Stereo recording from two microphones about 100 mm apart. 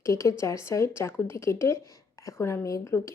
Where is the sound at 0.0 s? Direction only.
30° left (ahead or behind).